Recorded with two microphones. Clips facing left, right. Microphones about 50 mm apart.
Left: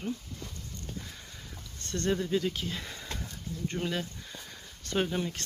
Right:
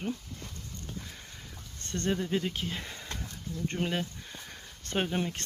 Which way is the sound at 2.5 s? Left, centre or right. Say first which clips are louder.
Even; right.